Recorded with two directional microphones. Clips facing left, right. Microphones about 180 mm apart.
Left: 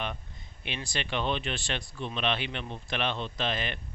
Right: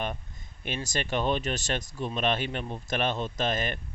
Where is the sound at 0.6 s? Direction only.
45° right (ahead or behind).